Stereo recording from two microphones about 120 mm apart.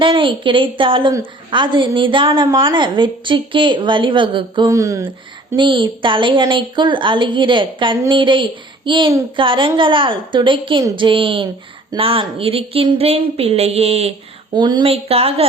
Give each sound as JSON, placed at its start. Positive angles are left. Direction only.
{"t": 0.0, "sound": "a woman's voice", "side_deg": -45}
{"t": 4.7, "sound": "speech", "side_deg": -25}
{"t": 5.5, "sound": "a woman's voice", "side_deg": -40}
{"t": 14.5, "sound": "speech", "side_deg": -40}
{"t": 14.8, "sound": "a woman's voice", "side_deg": -55}